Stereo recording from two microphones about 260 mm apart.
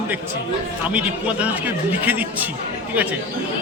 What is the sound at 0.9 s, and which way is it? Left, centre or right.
A man's voice, centre.